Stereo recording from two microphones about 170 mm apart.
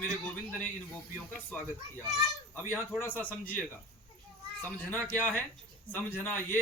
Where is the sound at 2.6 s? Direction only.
10° left (ahead or behind).